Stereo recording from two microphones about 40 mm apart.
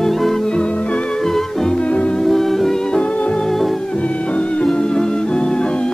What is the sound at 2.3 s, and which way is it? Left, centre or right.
Music, centre.